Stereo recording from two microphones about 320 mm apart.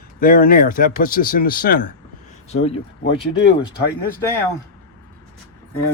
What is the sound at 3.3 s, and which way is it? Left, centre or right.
Speech, left.